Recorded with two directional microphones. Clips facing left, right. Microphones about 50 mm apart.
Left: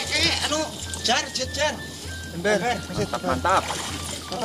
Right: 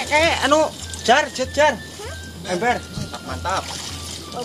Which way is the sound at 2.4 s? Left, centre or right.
Left.